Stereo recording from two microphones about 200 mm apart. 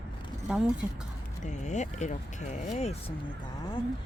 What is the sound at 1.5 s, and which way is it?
Speech, 35° left (ahead or behind).